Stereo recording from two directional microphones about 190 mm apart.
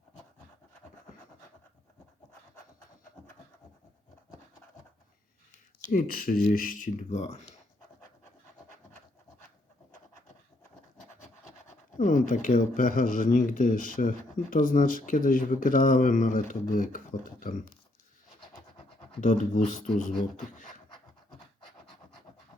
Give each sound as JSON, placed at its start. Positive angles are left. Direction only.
{"t": 5.9, "sound": "speech", "side_deg": 50}
{"t": 11.9, "sound": "speech", "side_deg": 40}
{"t": 19.2, "sound": "speech", "side_deg": 40}